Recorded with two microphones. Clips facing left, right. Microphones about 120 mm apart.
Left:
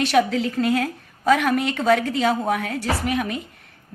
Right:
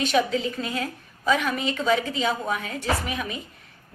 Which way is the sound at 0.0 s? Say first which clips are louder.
Left 4 dB; 70° left (ahead or behind).